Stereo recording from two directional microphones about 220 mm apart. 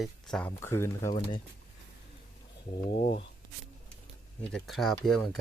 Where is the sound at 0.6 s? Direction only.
10° left (ahead or behind).